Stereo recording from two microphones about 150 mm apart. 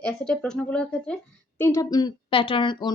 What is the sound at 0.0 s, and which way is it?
A woman's voice, 5° left (ahead or behind).